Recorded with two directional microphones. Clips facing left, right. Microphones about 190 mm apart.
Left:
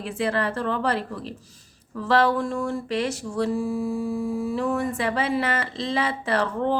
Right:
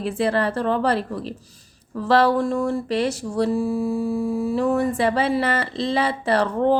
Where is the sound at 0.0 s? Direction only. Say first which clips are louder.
Right 4 dB; 35° right (ahead or behind).